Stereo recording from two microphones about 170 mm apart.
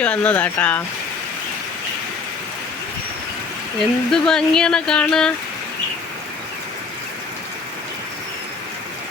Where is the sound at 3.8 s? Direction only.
5° left (ahead or behind).